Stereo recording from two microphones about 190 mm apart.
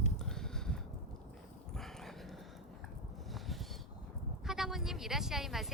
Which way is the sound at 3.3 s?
Centre (ahead or behind).